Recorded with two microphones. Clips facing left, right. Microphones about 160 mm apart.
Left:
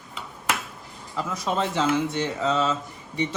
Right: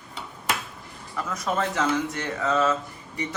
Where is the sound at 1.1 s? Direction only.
25° left (ahead or behind).